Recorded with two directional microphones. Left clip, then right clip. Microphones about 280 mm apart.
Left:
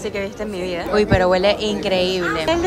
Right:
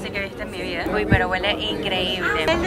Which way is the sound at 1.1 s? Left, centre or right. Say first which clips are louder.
Left 5 dB; left.